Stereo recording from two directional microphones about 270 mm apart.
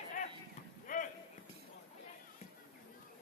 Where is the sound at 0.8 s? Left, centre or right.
Left.